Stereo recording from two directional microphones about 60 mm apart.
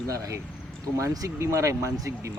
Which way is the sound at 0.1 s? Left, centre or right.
Right.